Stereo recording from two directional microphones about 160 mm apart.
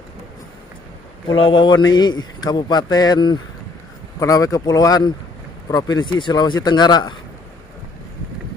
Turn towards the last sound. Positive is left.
turn(degrees=25)  # may be behind; listen again after turning